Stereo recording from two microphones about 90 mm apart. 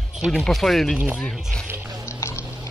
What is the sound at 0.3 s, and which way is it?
Speech, 5° left (ahead or behind).